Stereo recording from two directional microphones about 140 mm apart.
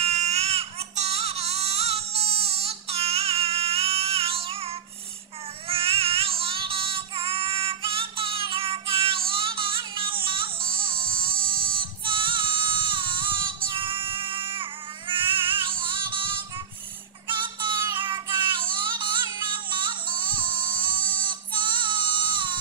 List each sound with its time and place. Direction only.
0.0 s baby cry: 50° right (ahead or behind)
5.7 s child singing: 40° right (ahead or behind)
13.7 s music: 35° right (ahead or behind)